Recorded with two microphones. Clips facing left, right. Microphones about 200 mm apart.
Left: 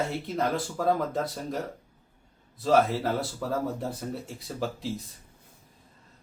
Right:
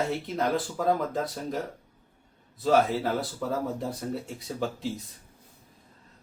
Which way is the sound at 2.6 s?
Centre (ahead or behind).